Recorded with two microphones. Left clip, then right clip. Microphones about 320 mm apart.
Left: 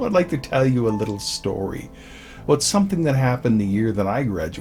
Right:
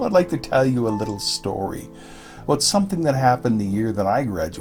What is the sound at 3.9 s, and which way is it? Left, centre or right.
Speech, right.